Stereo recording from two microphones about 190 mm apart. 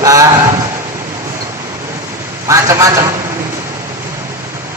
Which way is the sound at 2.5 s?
15° right (ahead or behind).